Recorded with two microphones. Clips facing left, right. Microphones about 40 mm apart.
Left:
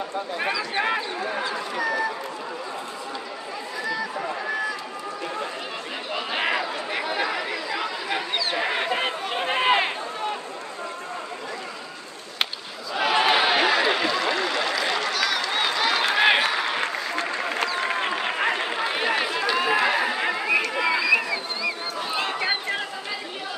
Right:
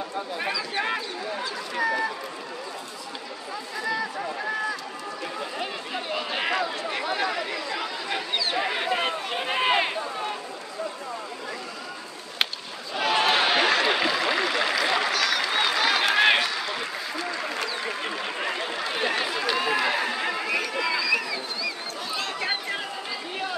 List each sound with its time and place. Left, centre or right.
0.4 s speech: centre
1.2 s speech: left
1.8 s speech: centre
6.1 s chatter: centre
12.9 s a sound: centre
15.1 s run: centre
16.4 s a sound: left
18.7 s chatter: left
19.4 s run: centre
20.8 s a sound: left